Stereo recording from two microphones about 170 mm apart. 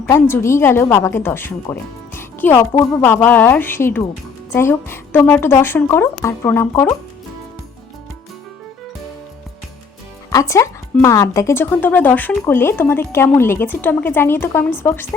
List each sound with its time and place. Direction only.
0.1 s speech: 15° left (ahead or behind)
10.2 s speech: 20° left (ahead or behind)